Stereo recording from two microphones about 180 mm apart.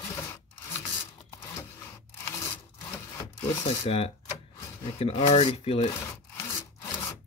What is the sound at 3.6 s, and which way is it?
Speech, 35° left (ahead or behind).